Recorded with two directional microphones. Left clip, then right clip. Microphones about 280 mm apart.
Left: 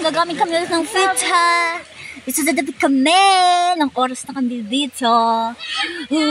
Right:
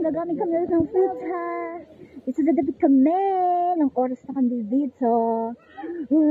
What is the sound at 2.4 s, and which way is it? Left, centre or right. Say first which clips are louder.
Speech: left 3 dB; left.